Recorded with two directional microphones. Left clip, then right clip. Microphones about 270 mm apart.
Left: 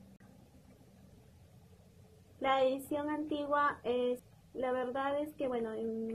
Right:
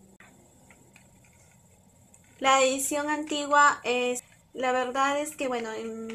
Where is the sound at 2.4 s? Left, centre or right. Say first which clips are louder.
Right 8 dB; centre.